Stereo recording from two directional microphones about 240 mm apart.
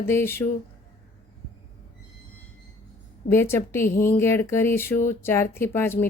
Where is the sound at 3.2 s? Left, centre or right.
Centre.